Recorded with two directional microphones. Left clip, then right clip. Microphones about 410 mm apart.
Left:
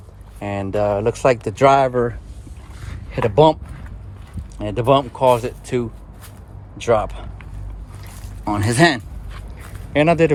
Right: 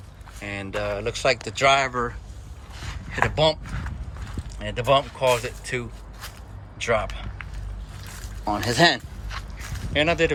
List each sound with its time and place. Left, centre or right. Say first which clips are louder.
0.4 s speech: left 8 dB; centre
3.3 s speech: left 9 dB; left
4.6 s speech: left 4 dB; centre
8.5 s speech: left 3 dB; centre